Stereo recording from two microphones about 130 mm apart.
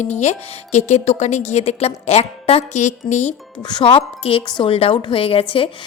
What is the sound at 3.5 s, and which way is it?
A woman's voice, 35° left (ahead or behind).